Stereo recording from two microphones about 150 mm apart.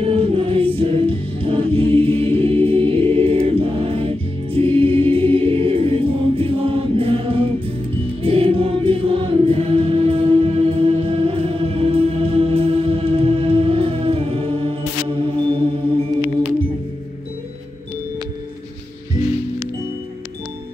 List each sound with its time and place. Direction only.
0.0 s music: 40° right (ahead or behind)